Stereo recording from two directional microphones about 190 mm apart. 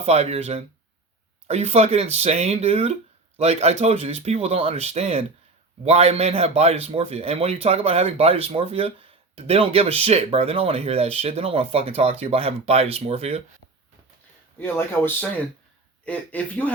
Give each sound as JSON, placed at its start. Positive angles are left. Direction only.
{"t": 0.0, "sound": "speech", "side_deg": -35}
{"t": 14.6, "sound": "speech", "side_deg": 10}